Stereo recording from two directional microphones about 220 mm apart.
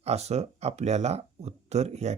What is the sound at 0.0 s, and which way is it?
Speech, 30° right (ahead or behind).